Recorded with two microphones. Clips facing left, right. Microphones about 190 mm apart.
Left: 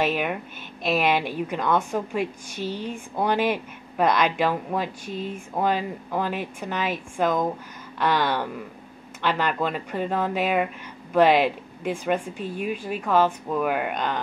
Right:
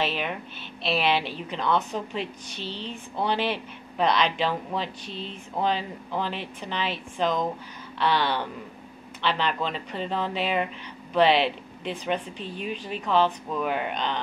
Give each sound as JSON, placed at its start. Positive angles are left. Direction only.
{"t": 0.1, "sound": "a woman's voice", "side_deg": 10}
{"t": 0.8, "sound": "a woman's voice", "side_deg": 45}
{"t": 1.1, "sound": "a woman's voice", "side_deg": 15}